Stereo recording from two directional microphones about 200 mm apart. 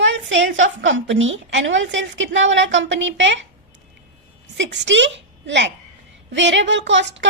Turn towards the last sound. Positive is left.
turn(degrees=-65)  # may be behind; listen again after turning